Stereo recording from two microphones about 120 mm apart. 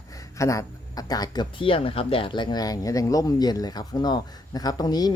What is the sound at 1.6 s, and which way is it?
Speech, 50° left (ahead or behind).